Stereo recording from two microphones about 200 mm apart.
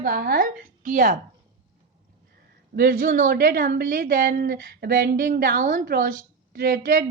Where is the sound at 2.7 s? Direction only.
45° right (ahead or behind).